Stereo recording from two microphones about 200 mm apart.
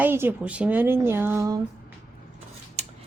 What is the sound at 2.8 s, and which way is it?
Scissors, 35° right (ahead or behind).